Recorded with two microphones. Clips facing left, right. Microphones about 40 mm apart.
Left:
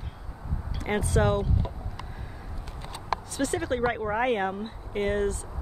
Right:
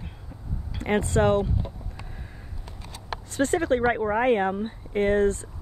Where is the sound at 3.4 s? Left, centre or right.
Right.